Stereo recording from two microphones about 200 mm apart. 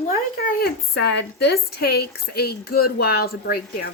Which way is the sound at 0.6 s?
55° left (ahead or behind).